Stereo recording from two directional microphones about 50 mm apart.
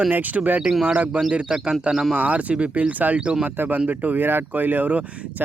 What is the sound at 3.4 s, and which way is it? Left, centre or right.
Speech, right.